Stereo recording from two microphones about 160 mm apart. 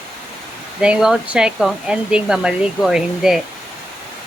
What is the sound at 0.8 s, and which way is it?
Speech, 5° right (ahead or behind).